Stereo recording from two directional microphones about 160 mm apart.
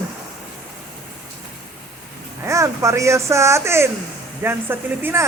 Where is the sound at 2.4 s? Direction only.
20° right (ahead or behind).